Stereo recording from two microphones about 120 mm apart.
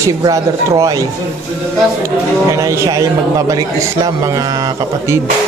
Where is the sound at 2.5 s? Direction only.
25° right (ahead or behind).